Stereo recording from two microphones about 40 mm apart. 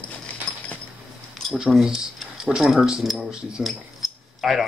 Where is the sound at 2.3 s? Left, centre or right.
Centre.